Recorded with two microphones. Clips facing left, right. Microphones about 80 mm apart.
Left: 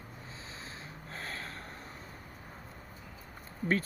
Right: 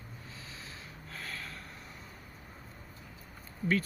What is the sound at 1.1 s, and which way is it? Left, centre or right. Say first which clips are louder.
Snort: left 1 dB; left.